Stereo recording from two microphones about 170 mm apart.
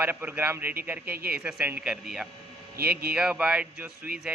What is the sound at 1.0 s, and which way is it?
Speech, 65° right (ahead or behind).